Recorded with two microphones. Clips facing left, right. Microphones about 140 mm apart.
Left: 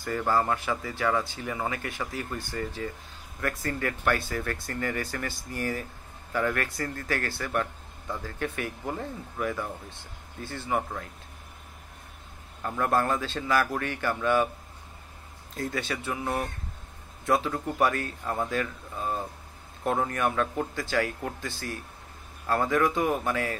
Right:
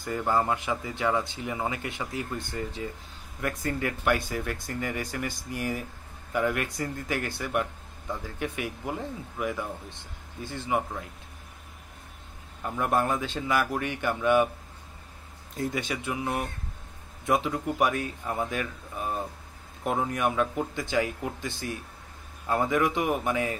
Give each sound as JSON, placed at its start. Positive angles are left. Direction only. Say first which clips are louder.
{"t": 0.3, "sound": "a man's voice", "louder": "even", "side_deg": -20}
{"t": 12.6, "sound": "speech", "louder": "even", "side_deg": -15}
{"t": 15.5, "sound": "speech", "louder": "right 1 dB", "side_deg": -20}